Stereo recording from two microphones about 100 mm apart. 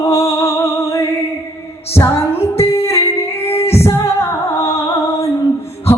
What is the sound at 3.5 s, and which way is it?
Music, 90° left.